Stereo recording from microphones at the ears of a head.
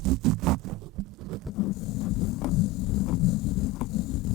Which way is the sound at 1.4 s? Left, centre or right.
Left.